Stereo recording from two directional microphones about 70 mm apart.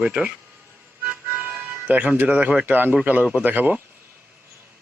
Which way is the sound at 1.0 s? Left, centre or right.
Right.